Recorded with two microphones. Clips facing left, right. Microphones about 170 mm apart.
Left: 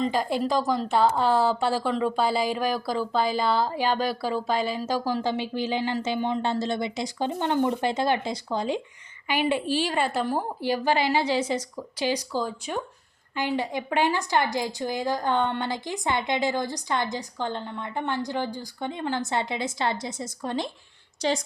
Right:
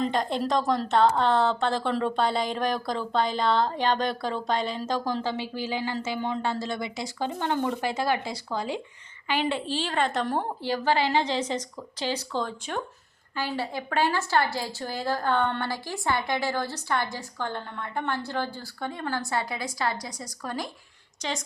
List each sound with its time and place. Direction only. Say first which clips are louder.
0.0 s a woman's voice: left 1 dB; 5° left (ahead or behind); by 21.4 s 35° left (ahead or behind)